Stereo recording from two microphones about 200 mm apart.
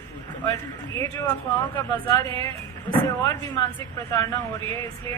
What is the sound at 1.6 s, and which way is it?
Speech, 20° left (ahead or behind).